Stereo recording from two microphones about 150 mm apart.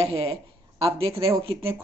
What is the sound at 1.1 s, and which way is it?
Speech, 20° right (ahead or behind).